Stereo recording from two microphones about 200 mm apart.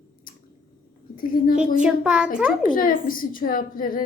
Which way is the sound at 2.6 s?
45° left (ahead or behind).